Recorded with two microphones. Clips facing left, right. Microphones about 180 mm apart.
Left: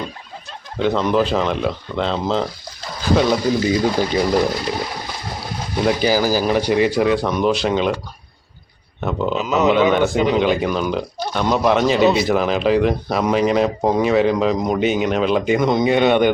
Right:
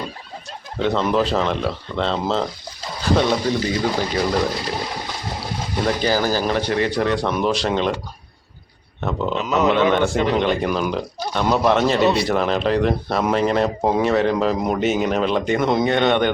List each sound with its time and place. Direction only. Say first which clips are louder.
0.8 s speech: left 2 dB; centre (ahead or behind)
5.8 s speech: left 3 dB; 10° left (ahead or behind)
9.0 s speech: left 2 dB; centre (ahead or behind)